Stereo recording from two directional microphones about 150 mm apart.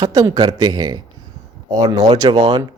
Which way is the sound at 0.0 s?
20° right (ahead or behind).